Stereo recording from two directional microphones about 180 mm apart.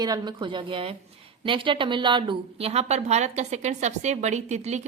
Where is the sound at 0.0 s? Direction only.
25° right (ahead or behind).